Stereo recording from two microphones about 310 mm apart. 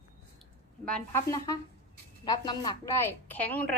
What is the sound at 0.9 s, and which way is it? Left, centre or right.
A woman's voice, centre.